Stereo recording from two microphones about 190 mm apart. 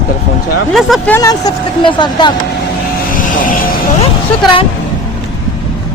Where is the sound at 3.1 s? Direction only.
45° left (ahead or behind).